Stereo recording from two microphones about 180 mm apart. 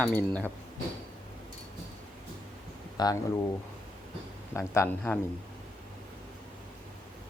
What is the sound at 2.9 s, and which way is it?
Speech, 20° left (ahead or behind).